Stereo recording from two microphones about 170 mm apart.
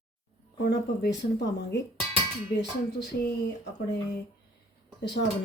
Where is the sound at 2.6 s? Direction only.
75° left (ahead or behind).